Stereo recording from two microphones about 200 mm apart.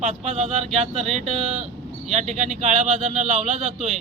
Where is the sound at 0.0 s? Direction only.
35° right (ahead or behind).